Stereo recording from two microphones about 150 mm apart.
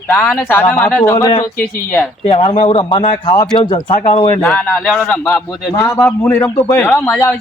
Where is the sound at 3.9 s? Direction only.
45° left (ahead or behind).